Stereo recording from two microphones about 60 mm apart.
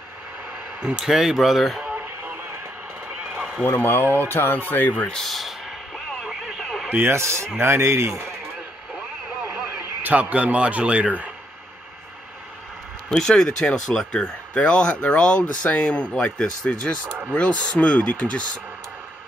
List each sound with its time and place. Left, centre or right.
0.8 s speech: centre
3.6 s speech: left
5.2 s speech: centre
5.9 s radio: centre
6.9 s speech: right
10.0 s a man's voice: right
13.1 s speech: centre